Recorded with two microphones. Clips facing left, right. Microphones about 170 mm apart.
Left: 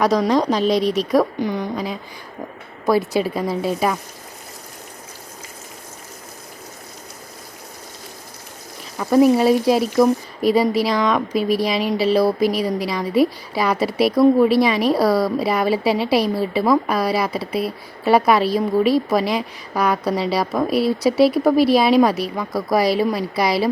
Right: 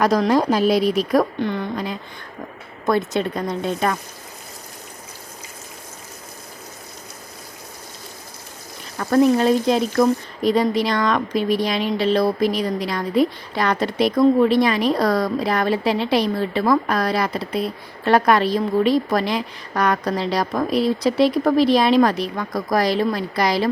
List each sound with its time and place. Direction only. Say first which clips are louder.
0.0 s speech: even; centre (ahead or behind)
1.4 s a woman's voice: left 1 dB; 15° left (ahead or behind)
1.7 s speech: left 1 dB; centre (ahead or behind)
3.1 s speech: left 2 dB; 5° left (ahead or behind)
9.0 s speech: left 2 dB; 5° left (ahead or behind)